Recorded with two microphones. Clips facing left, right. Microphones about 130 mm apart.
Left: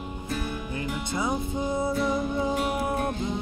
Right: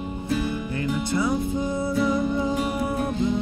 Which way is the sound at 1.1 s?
20° left (ahead or behind).